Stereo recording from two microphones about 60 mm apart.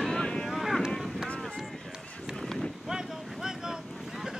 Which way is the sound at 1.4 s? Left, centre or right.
Centre.